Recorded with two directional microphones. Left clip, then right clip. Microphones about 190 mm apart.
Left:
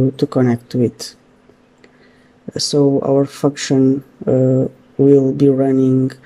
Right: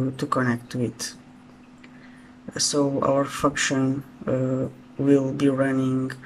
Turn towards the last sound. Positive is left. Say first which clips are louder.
# left 10 dB
turn(degrees=20)  # may be behind; listen again after turning